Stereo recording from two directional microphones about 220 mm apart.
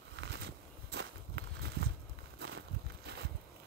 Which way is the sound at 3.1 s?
50° right (ahead or behind).